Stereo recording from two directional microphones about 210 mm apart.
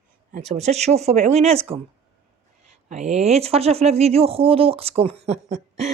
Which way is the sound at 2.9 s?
30° right (ahead or behind).